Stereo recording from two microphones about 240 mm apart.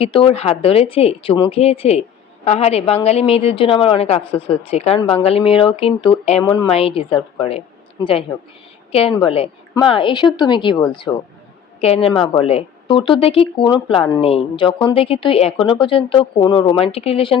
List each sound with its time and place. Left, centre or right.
0.0 s speech: left
8.9 s a man's voice: left